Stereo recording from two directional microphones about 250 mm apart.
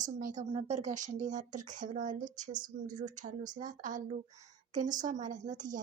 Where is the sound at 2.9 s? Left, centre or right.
Right.